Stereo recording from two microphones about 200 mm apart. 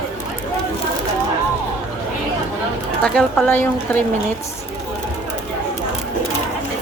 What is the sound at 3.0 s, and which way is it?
A woman's voice, 5° left (ahead or behind).